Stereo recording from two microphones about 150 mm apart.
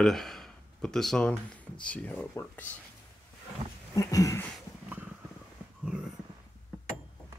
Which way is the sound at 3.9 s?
20° left (ahead or behind).